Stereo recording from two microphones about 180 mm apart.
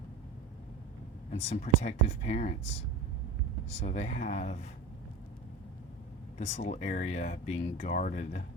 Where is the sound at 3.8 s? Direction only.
35° left (ahead or behind).